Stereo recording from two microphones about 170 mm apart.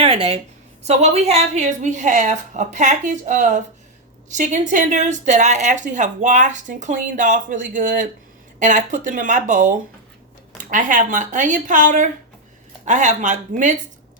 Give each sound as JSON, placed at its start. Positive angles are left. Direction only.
{"t": 0.0, "sound": "a woman's voice", "side_deg": -35}